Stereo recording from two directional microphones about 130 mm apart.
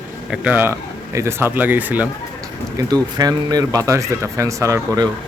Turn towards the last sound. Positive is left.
turn(degrees=-25)  # may be behind; listen again after turning